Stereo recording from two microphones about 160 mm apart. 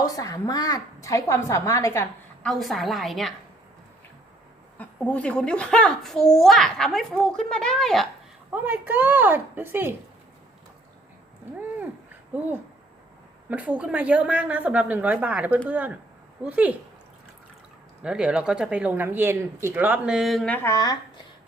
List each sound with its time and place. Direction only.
0.0 s a woman's voice: 25° left (ahead or behind)
2.4 s a child's voice: centre (ahead or behind)
4.8 s a child's voice: 10° left (ahead or behind)
8.4 s speech: 10° right (ahead or behind)
13.5 s speech: 10° right (ahead or behind)
18.0 s speech: 5° right (ahead or behind); by 20.9 s 20° left (ahead or behind)